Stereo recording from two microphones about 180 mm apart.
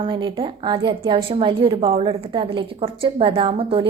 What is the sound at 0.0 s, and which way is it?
A woman's voice, 30° right (ahead or behind).